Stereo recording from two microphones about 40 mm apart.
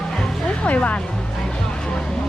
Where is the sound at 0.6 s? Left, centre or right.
Left.